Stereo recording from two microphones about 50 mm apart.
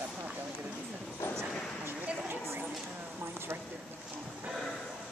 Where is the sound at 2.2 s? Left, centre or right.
Right.